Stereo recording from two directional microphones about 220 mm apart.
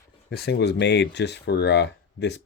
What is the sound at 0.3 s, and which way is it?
Speech, 45° left (ahead or behind).